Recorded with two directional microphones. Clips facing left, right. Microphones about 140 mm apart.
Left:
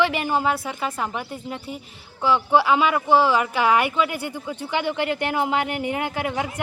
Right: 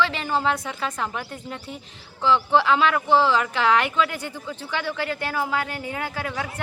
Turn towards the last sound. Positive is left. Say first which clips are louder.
# left 4 dB
turn(degrees=15)  # may be behind; listen again after turning